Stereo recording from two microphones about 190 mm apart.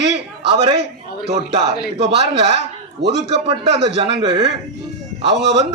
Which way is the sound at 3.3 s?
30° right (ahead or behind).